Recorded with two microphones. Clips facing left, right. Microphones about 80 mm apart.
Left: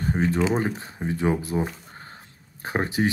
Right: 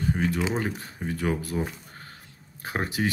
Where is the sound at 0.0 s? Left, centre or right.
Left.